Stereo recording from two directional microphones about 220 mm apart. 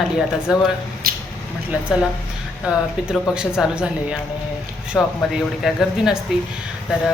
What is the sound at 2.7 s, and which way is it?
A woman's voice, 5° right (ahead or behind).